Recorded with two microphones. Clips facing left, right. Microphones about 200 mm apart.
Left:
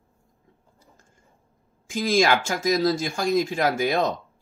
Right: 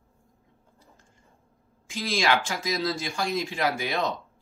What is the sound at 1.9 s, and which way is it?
Speech, 45° left (ahead or behind).